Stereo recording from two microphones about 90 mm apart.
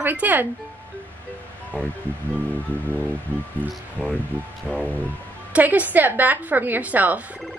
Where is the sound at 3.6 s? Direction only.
20° left (ahead or behind).